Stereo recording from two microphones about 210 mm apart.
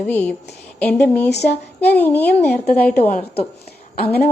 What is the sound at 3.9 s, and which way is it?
Speech, 50° left (ahead or behind).